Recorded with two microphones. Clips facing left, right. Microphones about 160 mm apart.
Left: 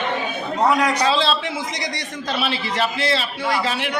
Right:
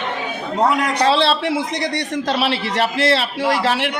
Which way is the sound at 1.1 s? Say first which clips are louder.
Right 4 dB; 65° right (ahead or behind).